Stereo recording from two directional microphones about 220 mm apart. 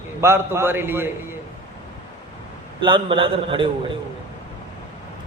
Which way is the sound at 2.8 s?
20° right (ahead or behind).